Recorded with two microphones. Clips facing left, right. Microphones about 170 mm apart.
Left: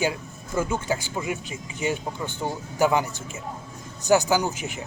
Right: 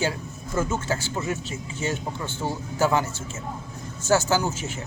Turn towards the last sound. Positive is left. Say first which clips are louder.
# left 1 dB
turn(degrees=15)  # may be behind; listen again after turning